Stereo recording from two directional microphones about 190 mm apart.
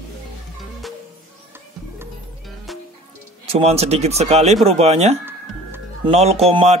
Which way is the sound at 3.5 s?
35° right (ahead or behind).